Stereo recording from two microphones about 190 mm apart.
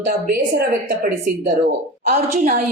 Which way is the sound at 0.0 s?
50° right (ahead or behind).